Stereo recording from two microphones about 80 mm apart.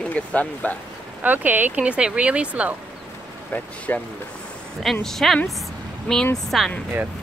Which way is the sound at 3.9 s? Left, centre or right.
Left.